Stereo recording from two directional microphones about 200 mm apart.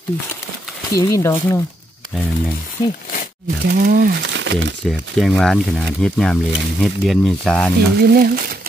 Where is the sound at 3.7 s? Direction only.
50° right (ahead or behind).